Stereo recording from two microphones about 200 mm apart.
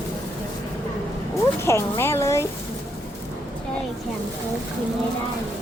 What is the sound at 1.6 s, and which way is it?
Speech, 15° left (ahead or behind).